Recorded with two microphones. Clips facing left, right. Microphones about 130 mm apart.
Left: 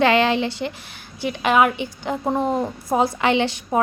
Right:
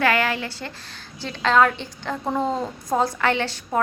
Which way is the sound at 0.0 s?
25° left (ahead or behind).